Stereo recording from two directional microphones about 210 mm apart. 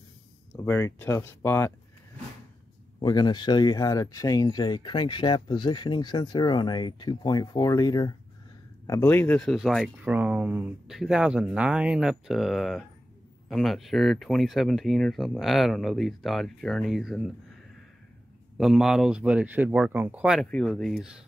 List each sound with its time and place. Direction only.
0.6 s speech: 10° left (ahead or behind)
3.0 s speech: 20° left (ahead or behind); by 17.3 s centre (ahead or behind)
18.6 s speech: centre (ahead or behind)